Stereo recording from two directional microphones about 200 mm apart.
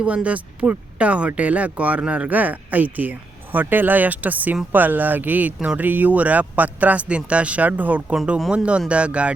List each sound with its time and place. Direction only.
0.0 s speech: 5° right (ahead or behind)